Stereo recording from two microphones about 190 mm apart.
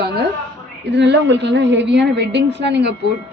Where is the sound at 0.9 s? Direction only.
65° right (ahead or behind).